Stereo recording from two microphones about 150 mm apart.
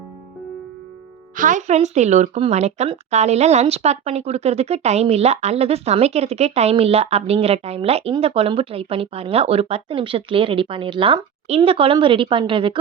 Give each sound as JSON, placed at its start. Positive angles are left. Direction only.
{"t": 1.4, "sound": "speech", "side_deg": -55}